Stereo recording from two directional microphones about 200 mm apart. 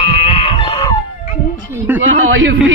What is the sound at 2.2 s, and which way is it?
Speech, 75° right (ahead or behind).